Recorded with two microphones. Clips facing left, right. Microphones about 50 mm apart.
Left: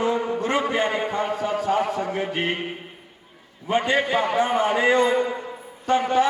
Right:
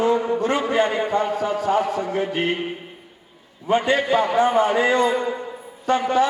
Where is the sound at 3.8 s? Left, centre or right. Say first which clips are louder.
Right 1 dB; centre.